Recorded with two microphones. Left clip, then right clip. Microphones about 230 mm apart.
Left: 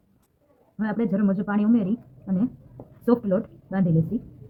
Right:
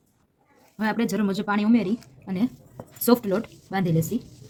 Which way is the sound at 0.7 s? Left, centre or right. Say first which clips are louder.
Right 1 dB; right.